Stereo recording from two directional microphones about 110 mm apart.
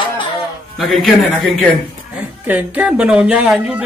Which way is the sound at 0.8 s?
Centre (ahead or behind).